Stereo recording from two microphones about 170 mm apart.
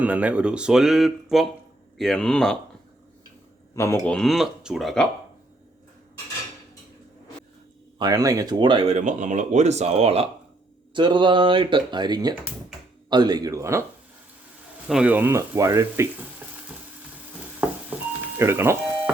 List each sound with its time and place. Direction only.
0.0 s speech: 10° right (ahead or behind)
3.8 s speech: 15° left (ahead or behind)
4.1 s speech: centre (ahead or behind)
7.9 s speech: 25° right (ahead or behind)
14.8 s speech: 5° right (ahead or behind)
17.9 s a sound: 10° right (ahead or behind)